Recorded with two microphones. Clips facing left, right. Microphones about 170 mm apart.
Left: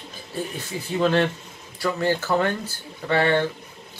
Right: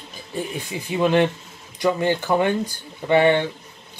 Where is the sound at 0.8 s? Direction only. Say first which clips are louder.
Right 2 dB; 15° right (ahead or behind).